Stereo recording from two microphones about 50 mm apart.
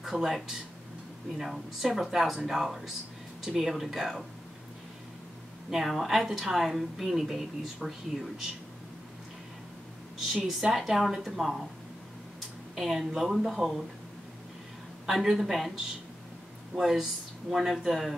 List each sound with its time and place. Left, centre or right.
0.0 s a woman's voice: centre
5.7 s a woman's voice: centre
10.1 s a woman's voice: centre
12.7 s a woman's voice: centre
15.0 s a woman's voice: centre